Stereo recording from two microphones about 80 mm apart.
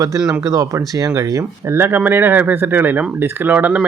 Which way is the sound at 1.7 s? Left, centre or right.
Right.